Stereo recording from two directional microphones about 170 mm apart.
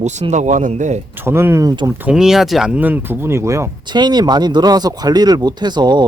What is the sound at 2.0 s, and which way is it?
Speech, 5° right (ahead or behind).